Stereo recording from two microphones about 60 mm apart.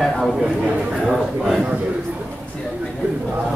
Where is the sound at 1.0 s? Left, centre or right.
Centre.